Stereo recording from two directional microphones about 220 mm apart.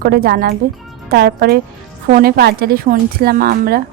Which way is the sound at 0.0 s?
45° right (ahead or behind).